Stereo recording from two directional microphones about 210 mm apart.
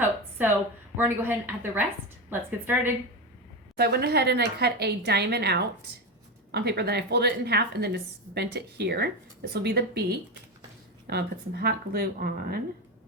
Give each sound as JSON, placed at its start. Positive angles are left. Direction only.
{"t": 0.0, "sound": "a sound", "side_deg": -10}
{"t": 0.9, "sound": "a woman's voice", "side_deg": -10}
{"t": 3.8, "sound": "a woman's voice", "side_deg": -50}